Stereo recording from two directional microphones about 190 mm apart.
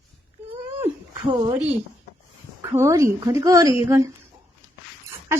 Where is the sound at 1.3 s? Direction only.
25° right (ahead or behind).